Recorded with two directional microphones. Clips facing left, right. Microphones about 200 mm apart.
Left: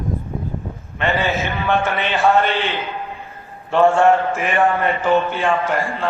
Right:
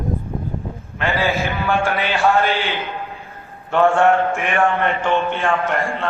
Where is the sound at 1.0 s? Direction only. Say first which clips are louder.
Even; 5° right (ahead or behind).